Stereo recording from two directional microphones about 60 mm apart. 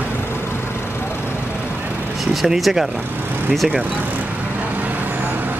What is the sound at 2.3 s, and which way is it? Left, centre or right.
Speech, centre.